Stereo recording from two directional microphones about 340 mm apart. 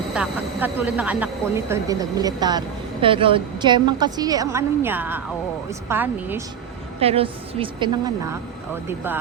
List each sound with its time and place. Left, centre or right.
0.1 s speech: centre
7.0 s speech: centre